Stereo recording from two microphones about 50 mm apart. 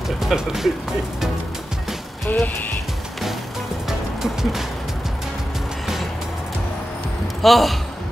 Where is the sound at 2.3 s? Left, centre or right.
Left.